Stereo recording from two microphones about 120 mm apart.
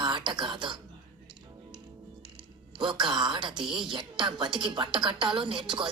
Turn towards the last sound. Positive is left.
turn(degrees=-40)  # may be behind; listen again after turning